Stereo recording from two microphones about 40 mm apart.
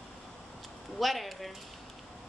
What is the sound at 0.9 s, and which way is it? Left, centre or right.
Speech, centre.